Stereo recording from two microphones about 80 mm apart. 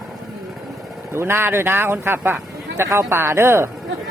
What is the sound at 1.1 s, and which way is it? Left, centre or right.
Speech, right.